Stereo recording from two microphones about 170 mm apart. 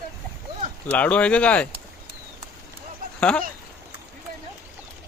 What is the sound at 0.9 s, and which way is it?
Speech, 10° left (ahead or behind).